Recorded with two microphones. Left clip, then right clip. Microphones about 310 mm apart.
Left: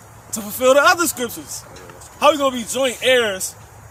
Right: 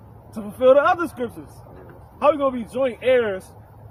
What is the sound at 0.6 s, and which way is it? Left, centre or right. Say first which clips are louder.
Speech: left 2 dB; centre.